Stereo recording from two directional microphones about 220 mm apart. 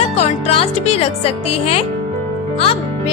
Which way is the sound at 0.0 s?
25° left (ahead or behind).